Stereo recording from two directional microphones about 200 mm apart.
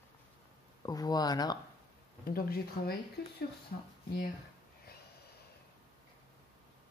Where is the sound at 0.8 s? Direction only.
20° left (ahead or behind).